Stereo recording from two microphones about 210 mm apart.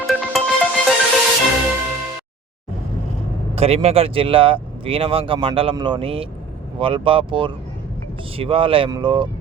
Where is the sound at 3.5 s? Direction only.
30° right (ahead or behind).